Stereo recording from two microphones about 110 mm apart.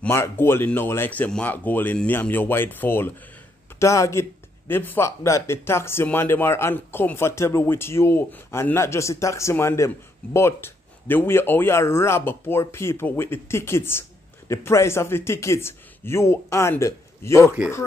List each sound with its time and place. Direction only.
0.1 s speech: 20° left (ahead or behind)